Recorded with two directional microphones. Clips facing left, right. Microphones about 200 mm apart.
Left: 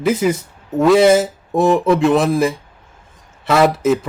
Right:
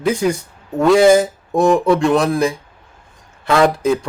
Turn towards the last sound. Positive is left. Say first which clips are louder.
# even
turn(degrees=5)  # may be behind; listen again after turning